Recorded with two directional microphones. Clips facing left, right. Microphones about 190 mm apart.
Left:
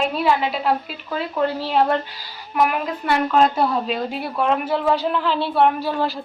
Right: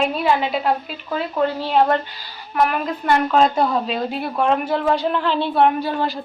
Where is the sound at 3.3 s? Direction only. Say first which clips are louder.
Left 1 dB; 5° left (ahead or behind).